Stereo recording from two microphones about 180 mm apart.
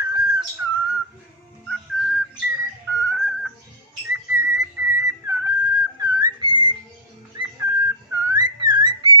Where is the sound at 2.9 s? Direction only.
15° right (ahead or behind).